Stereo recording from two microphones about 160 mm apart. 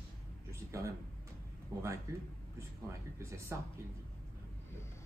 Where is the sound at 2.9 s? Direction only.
20° right (ahead or behind).